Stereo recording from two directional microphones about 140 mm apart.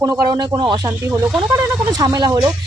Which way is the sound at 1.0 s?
20° right (ahead or behind).